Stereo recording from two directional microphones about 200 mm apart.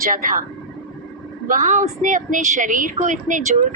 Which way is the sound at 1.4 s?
40° right (ahead or behind).